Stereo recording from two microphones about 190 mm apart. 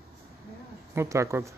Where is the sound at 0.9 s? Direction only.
15° right (ahead or behind).